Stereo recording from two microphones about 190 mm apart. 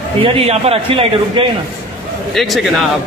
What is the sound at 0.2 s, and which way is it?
A man's voice, 30° right (ahead or behind).